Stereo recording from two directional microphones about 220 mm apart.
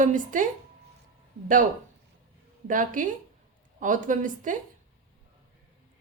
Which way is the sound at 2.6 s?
35° right (ahead or behind).